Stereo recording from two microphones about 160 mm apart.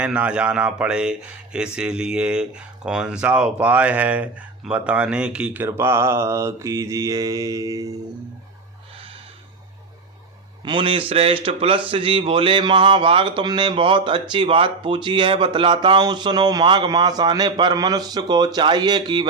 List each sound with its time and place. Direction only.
0.0 s speech: 5° right (ahead or behind)
10.6 s a man's voice: 30° right (ahead or behind)